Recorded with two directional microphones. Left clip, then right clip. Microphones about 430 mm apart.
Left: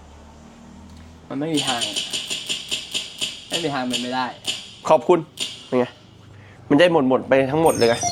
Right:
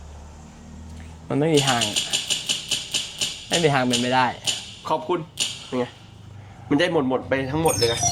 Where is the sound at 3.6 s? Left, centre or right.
Right.